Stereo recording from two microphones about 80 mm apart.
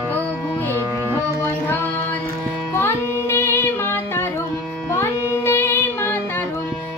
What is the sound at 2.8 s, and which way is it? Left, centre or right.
Music, left.